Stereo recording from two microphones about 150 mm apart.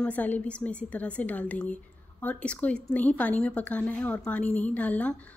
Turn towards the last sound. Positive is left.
turn(degrees=10)  # may be behind; listen again after turning